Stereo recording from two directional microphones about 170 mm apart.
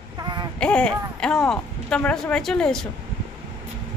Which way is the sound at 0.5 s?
5° left (ahead or behind).